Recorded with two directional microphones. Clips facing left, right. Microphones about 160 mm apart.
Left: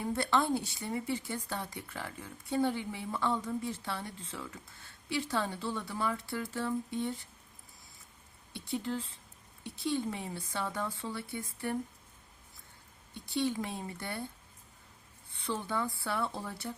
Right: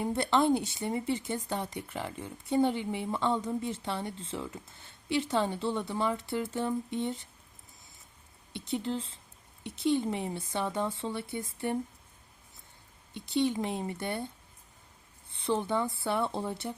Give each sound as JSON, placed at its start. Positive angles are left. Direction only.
{"t": 0.0, "sound": "speech", "side_deg": -25}
{"t": 8.5, "sound": "speech", "side_deg": -20}
{"t": 13.1, "sound": "speech", "side_deg": -20}
{"t": 15.3, "sound": "speech", "side_deg": -25}